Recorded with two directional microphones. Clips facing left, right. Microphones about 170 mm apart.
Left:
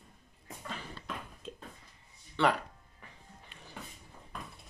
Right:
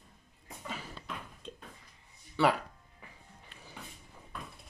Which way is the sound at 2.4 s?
5° right (ahead or behind).